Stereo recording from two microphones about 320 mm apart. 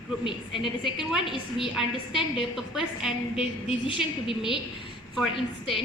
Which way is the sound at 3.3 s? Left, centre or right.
Centre.